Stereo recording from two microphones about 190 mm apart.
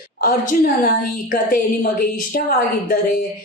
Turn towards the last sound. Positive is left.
turn(degrees=50)  # may be behind; listen again after turning